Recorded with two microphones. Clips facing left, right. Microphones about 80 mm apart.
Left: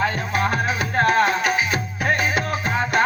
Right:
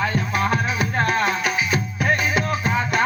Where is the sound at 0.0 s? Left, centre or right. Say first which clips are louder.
Even; left.